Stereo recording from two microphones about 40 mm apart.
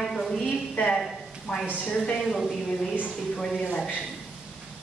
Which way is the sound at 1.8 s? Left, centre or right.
Left.